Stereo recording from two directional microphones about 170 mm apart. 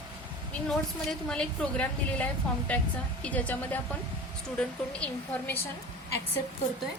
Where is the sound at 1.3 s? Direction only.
5° left (ahead or behind).